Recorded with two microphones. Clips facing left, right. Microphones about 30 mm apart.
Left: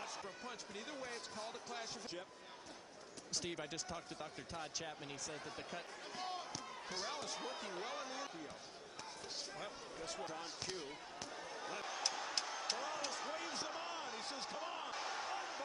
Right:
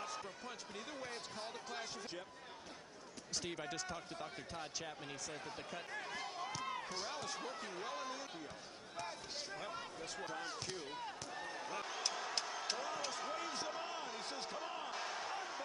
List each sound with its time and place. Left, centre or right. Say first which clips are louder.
0.0 s speech: right 2 dB; centre
3.3 s speech: right 1 dB; centre
6.1 s a sound: left 1 dB; centre
6.9 s speech: even; centre
10.0 s speech: left 1 dB; centre
10.9 s slam: right 3 dB; right
11.7 s a sound: even; centre